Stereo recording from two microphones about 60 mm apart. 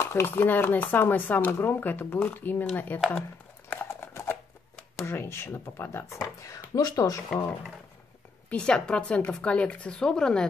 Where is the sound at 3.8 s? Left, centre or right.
Left.